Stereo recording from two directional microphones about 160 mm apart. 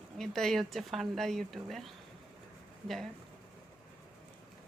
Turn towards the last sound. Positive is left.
turn(degrees=0)  # may be behind; listen again after turning